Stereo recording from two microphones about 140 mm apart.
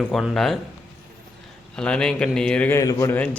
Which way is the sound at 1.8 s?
5° left (ahead or behind).